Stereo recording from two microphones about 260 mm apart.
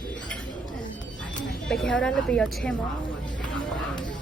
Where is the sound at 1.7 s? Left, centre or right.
Centre.